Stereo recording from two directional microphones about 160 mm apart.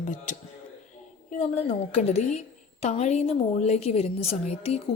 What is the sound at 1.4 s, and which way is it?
A woman's voice, 45° left (ahead or behind).